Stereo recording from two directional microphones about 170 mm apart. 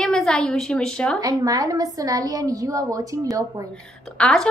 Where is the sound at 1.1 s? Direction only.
20° right (ahead or behind).